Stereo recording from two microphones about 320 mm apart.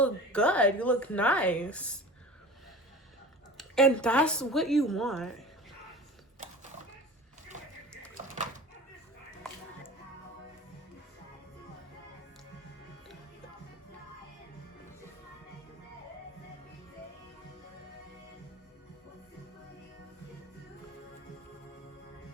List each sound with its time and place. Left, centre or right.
0.0 s a woman's voice: centre
3.6 s a woman's voice: centre